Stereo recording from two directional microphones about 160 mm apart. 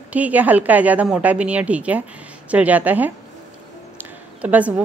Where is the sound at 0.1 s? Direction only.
10° right (ahead or behind).